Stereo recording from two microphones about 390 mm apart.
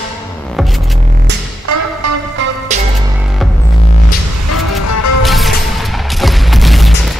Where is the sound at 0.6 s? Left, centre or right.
Centre.